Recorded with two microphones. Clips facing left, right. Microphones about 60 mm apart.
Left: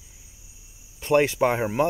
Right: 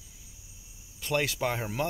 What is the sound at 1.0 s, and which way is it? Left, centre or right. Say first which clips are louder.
Speech: left 9 dB; left.